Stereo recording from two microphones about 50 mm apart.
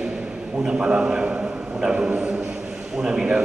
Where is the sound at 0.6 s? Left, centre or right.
Right.